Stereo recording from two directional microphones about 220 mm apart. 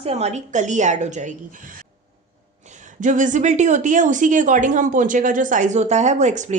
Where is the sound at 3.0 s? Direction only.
35° right (ahead or behind).